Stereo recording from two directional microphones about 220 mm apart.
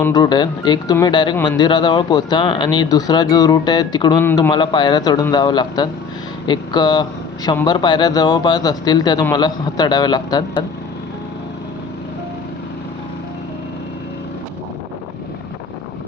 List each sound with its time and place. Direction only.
0.0 s speech: 20° left (ahead or behind)